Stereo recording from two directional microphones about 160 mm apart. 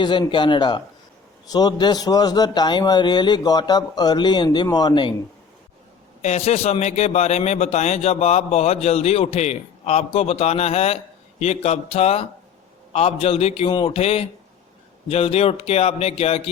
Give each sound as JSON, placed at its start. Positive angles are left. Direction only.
{"t": 0.0, "sound": "a man's voice", "side_deg": 30}
{"t": 6.2, "sound": "a man's voice", "side_deg": 45}